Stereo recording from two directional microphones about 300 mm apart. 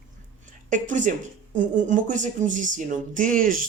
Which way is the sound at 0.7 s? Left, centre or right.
Right.